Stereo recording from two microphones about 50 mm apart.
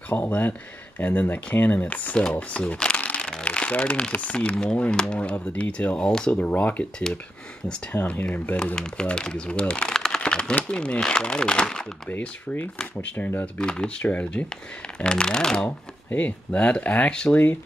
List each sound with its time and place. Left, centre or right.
0.1 s speech: left
3.2 s a sound: centre
4.2 s speech: left
6.4 s speech: left
7.9 s speech: left
8.7 s speech: centre
9.9 s typing: centre
10.5 s speech: left
13.0 s speech: left
14.0 s speech: left
15.0 s speech: centre
16.1 s speech: left
17.3 s speech: left